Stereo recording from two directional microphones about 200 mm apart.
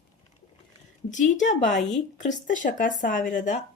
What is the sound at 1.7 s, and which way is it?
Speech, centre (ahead or behind).